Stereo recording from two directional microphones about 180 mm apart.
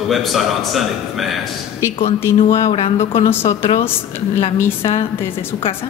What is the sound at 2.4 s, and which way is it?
Speech, 35° left (ahead or behind).